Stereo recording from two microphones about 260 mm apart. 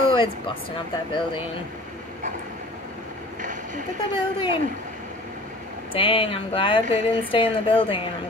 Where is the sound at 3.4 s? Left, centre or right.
Right.